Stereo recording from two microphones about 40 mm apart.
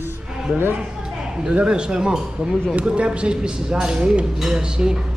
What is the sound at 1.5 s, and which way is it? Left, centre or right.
A man's voice, right.